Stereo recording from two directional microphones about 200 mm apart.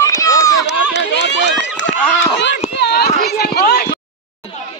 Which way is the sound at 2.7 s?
55° left (ahead or behind).